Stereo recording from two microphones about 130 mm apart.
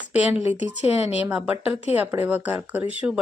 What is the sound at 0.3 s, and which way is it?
Speech, 55° left (ahead or behind).